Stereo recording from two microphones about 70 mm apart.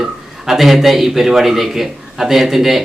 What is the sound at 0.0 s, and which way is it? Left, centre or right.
A man's voice, centre.